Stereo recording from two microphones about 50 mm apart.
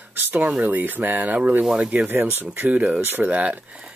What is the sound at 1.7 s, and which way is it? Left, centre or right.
Speech, right.